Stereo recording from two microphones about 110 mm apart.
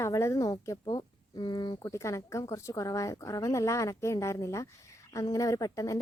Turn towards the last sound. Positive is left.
turn(degrees=30)  # may be behind; listen again after turning